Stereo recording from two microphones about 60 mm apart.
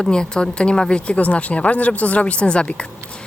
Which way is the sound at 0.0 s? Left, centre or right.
Centre.